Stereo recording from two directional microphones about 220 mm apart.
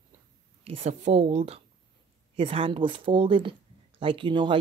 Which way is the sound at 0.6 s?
30° right (ahead or behind).